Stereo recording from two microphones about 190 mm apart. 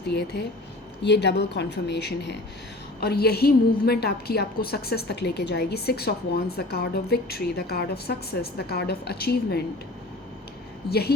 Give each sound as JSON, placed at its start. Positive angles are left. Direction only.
{"t": 0.1, "sound": "a woman's voice", "side_deg": 60}
{"t": 10.8, "sound": "a woman's voice", "side_deg": 55}